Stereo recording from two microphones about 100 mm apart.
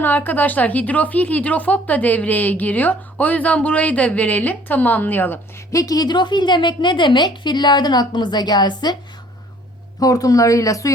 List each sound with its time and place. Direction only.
0.0 s a woman's voice: 20° left (ahead or behind)
5.7 s a woman's voice: 40° left (ahead or behind)
10.0 s speech: 35° left (ahead or behind)